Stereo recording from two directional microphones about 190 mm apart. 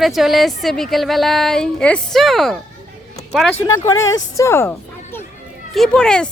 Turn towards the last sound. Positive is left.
turn(degrees=5)  # may be behind; listen again after turning